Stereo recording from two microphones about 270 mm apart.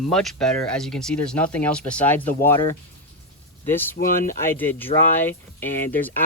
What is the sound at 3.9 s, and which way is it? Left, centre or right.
Speech, left.